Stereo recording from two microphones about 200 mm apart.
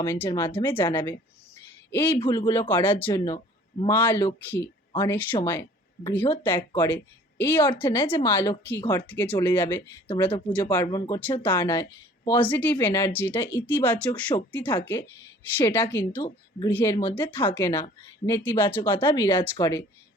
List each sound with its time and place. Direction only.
0.0 s speech: 15° left (ahead or behind)
1.5 s a sound: 10° left (ahead or behind)
2.1 s speech: 25° left (ahead or behind)
2.5 s speech: 10° left (ahead or behind)
4.9 s speech: 20° left (ahead or behind)
5.1 s speech: 10° left (ahead or behind)